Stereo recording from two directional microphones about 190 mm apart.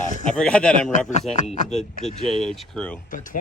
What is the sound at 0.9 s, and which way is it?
Speech, 40° left (ahead or behind).